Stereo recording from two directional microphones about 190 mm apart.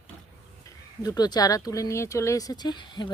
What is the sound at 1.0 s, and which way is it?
Speech, 20° left (ahead or behind).